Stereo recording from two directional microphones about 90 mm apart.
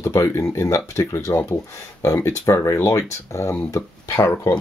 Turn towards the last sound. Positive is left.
turn(degrees=35)  # may be behind; listen again after turning